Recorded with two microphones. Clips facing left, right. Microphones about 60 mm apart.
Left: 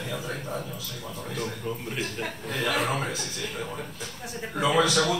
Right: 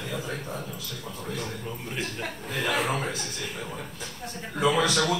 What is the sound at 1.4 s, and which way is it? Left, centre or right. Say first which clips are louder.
Chuckle: left 3 dB; centre.